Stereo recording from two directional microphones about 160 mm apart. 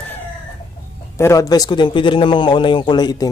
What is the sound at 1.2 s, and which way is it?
A man's voice, 20° left (ahead or behind).